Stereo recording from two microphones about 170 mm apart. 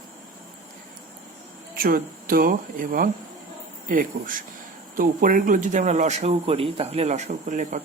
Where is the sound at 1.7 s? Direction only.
60° right (ahead or behind).